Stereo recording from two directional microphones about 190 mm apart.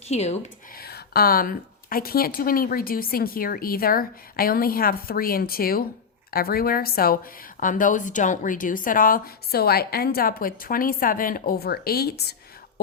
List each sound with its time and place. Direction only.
0.1 s speech: 35° left (ahead or behind)
0.8 s speech: 55° left (ahead or behind)